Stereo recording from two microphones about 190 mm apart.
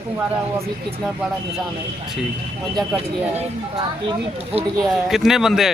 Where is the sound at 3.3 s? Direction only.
35° right (ahead or behind).